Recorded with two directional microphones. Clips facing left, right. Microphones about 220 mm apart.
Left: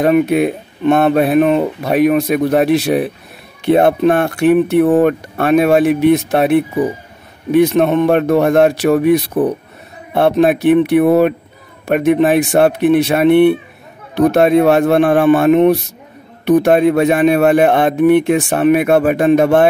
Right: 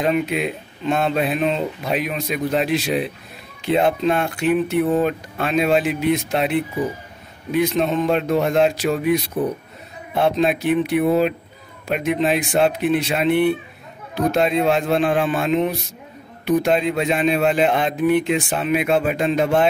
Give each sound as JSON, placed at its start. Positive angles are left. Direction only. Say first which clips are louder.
{"t": 0.0, "sound": "speech", "louder": "left 8 dB", "side_deg": 60}